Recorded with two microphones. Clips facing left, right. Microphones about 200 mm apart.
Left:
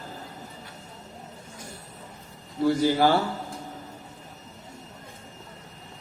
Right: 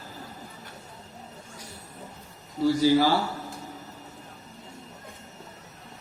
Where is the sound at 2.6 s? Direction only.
55° left (ahead or behind).